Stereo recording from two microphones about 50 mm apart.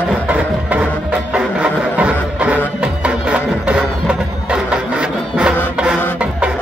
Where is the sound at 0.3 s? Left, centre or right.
Right.